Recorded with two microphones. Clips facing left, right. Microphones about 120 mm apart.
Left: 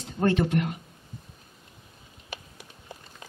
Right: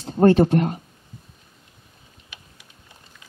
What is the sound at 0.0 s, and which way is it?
Speech, 40° right (ahead or behind).